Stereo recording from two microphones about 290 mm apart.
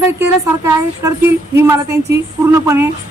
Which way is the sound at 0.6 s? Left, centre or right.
Centre.